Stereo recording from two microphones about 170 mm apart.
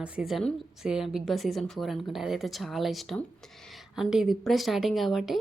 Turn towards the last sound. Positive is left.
turn(degrees=0)  # may be behind; listen again after turning